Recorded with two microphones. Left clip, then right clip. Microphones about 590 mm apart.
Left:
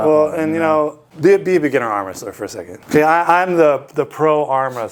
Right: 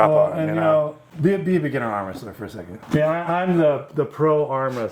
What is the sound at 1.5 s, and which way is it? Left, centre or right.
Speech, left.